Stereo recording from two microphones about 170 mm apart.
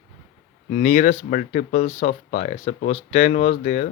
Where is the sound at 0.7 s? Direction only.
45° left (ahead or behind).